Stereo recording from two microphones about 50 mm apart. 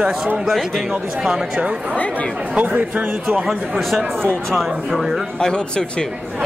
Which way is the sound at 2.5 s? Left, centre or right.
Right.